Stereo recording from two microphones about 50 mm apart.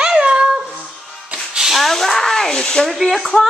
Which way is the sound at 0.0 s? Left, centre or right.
Centre.